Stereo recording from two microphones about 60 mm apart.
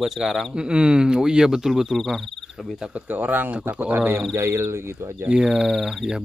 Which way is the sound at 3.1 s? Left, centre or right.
Right.